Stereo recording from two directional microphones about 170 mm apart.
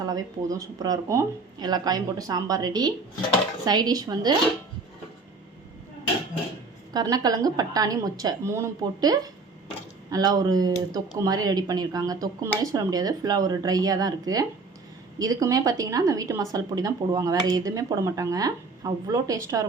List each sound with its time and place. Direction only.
0.0 s speech: 20° right (ahead or behind)
6.9 s speech: 25° right (ahead or behind)